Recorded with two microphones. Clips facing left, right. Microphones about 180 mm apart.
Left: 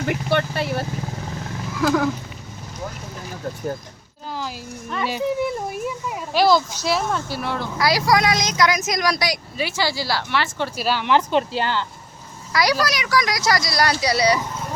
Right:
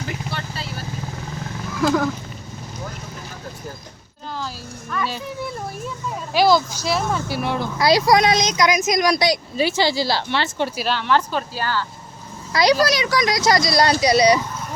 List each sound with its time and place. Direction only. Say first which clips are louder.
0.1 s speech: left 8 dB; 60° left (ahead or behind)
1.8 s speech: even; 5° left (ahead or behind)
4.4 s a child's voice: left 1 dB; 20° left (ahead or behind)
6.3 s speech: right 1 dB; centre (ahead or behind)
7.3 s speech: right 3 dB; 15° right (ahead or behind)
10.8 s speech: left 1 dB; 5° left (ahead or behind)
11.0 s a woman's voice: left 3 dB; 15° left (ahead or behind)
12.8 s speech: right 3 dB; 25° right (ahead or behind)